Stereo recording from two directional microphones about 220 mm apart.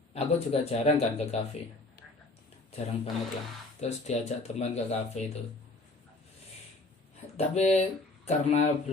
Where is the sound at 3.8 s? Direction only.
30° left (ahead or behind).